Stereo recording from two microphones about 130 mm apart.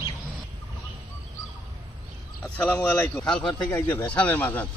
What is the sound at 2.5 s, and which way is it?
Speech, 10° left (ahead or behind).